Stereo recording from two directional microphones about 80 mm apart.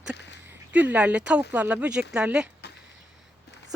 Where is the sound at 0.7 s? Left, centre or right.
Centre.